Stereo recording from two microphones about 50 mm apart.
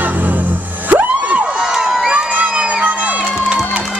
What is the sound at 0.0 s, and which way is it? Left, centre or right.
Music, right.